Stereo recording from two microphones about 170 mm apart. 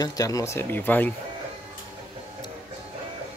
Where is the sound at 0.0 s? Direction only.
20° left (ahead or behind).